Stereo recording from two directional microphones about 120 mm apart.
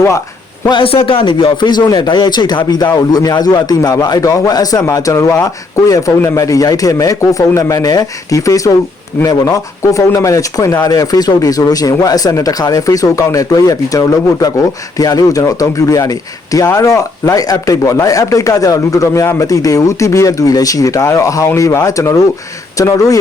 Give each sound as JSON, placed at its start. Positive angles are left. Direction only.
{"t": 0.7, "sound": "a man's voice", "side_deg": 50}